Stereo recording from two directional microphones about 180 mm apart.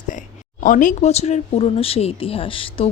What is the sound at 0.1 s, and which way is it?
Speech, 45° left (ahead or behind).